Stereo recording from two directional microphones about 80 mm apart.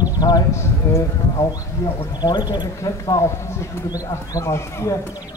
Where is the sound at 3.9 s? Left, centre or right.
Left.